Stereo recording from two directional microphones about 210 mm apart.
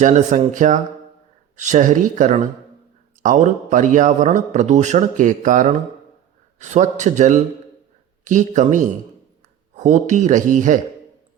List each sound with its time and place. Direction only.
0.0 s a man's voice: 35° right (ahead or behind)